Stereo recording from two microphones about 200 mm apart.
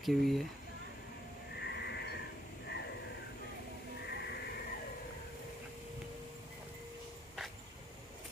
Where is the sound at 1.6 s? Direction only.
55° left (ahead or behind).